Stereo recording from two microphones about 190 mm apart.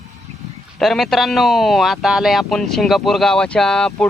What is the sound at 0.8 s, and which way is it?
Speech, centre (ahead or behind).